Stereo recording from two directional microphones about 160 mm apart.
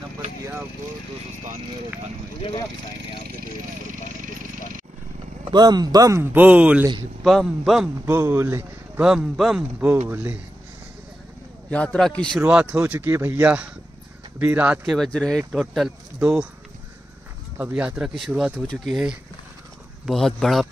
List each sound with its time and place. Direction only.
5.5 s speech: 25° right (ahead or behind); by 7.9 s centre (ahead or behind)
8.0 s speech: 15° right (ahead or behind)
9.0 s speech: 5° right (ahead or behind)
11.7 s a man's voice: 5° left (ahead or behind)
12.4 s speech: 10° right (ahead or behind)
17.6 s speech: 5° right (ahead or behind)